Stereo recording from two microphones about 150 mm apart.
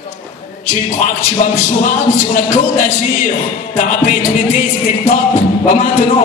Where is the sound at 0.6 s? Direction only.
55° left (ahead or behind).